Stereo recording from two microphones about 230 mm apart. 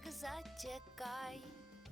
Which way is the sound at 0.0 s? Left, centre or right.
Centre.